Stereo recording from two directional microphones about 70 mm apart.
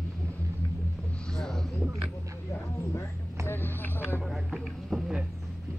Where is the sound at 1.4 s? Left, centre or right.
Centre.